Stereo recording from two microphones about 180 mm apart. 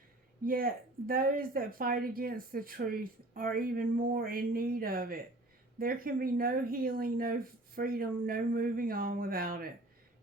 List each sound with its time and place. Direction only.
0.4 s speech: 55° right (ahead or behind)